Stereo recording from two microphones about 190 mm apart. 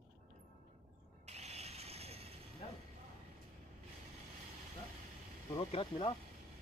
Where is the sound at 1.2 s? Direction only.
35° right (ahead or behind).